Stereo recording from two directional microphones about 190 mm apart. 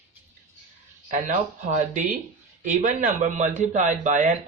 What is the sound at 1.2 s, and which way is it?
A man's voice, 40° right (ahead or behind).